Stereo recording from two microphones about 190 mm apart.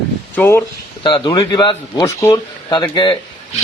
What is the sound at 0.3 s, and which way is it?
Speech, 15° left (ahead or behind).